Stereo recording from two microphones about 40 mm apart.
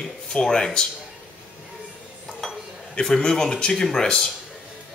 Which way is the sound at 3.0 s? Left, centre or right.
Centre.